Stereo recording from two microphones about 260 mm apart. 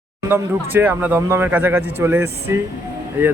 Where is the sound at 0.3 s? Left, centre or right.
Centre.